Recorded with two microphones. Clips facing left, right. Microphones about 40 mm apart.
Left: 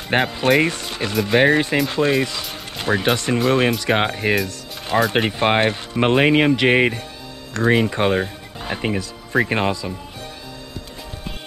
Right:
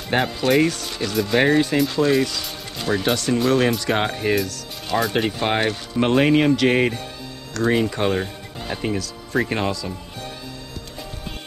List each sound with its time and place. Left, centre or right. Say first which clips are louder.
0.1 s speech: left 2 dB; left
2.5 s music: left 2 dB; left
3.4 s speech: left 2 dB; left
4.5 s music: left 1 dB; left
5.1 s speech: left 3 dB; left